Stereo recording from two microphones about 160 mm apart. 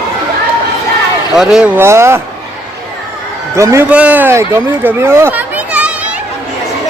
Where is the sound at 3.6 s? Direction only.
20° right (ahead or behind).